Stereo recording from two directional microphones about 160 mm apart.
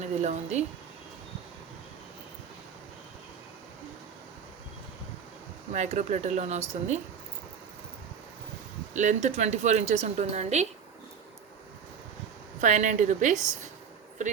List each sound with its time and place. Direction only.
0.0 s a woman's voice: 45° right (ahead or behind)
5.7 s a woman's voice: 45° right (ahead or behind)
8.9 s a woman's voice: 50° right (ahead or behind)
12.5 s a woman's voice: 50° right (ahead or behind)